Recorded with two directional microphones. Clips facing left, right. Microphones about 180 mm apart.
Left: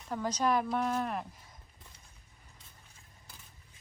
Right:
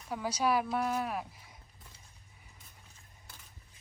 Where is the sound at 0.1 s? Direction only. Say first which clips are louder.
Left 1 dB; 10° right (ahead or behind).